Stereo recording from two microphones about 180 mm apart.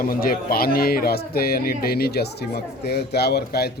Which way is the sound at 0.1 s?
55° left (ahead or behind).